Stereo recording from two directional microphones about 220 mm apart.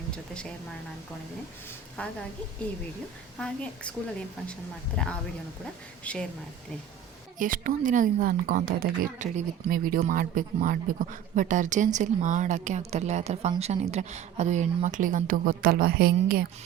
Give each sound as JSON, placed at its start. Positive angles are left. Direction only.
{"t": 2.0, "sound": "a woman's voice", "side_deg": 5}
{"t": 3.3, "sound": "a woman's voice", "side_deg": 5}
{"t": 5.0, "sound": "a woman's voice", "side_deg": 5}
{"t": 7.3, "sound": "a woman's voice", "side_deg": -40}